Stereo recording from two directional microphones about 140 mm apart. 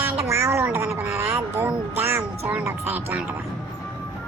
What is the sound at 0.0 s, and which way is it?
Music, 20° right (ahead or behind).